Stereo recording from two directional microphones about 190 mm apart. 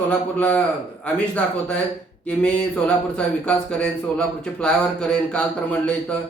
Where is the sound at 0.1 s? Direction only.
5° left (ahead or behind).